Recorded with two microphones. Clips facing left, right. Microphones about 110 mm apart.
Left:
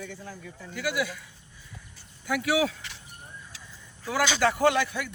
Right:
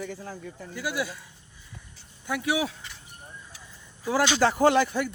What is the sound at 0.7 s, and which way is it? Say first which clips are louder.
Speech: left 1 dB; 30° right (ahead or behind).